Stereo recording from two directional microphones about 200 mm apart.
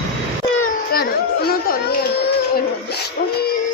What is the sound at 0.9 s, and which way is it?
Children playing, 50° left (ahead or behind).